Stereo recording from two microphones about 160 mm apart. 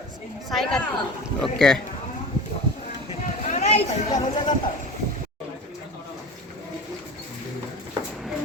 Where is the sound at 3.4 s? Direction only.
45° left (ahead or behind).